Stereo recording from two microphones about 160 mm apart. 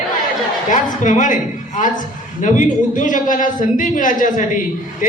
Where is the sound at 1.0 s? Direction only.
55° left (ahead or behind).